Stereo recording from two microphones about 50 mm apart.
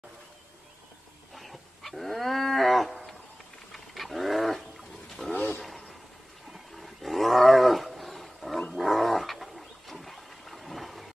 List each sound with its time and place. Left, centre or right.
1.3 s wild animals: centre
5.2 s a sound: centre
6.5 s roaring cats: centre
8.7 s dog: centre